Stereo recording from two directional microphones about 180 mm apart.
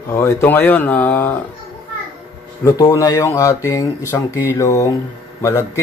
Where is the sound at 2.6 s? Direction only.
20° left (ahead or behind).